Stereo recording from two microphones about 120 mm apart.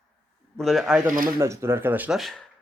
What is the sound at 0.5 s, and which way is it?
Speech, centre (ahead or behind).